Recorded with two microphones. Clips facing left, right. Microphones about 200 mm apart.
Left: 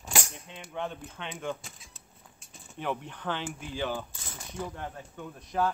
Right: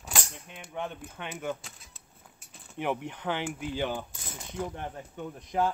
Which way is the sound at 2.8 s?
15° right (ahead or behind).